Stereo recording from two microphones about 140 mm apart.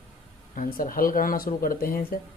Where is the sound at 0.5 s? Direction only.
80° left.